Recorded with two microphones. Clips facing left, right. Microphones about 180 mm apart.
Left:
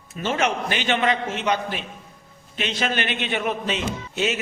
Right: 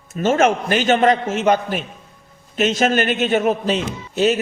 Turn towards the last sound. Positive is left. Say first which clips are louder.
# right 7 dB
turn(degrees=-40)  # may be behind; listen again after turning